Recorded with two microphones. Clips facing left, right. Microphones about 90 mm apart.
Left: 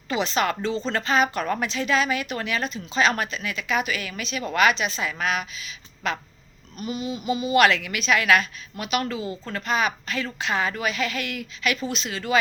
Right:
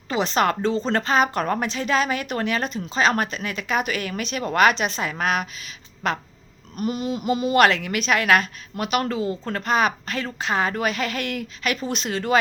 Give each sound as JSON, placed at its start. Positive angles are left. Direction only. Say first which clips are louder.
{"t": 0.1, "sound": "speech", "louder": "right 3 dB", "side_deg": -45}